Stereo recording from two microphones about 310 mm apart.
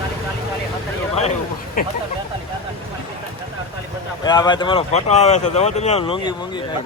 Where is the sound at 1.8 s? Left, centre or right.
Left.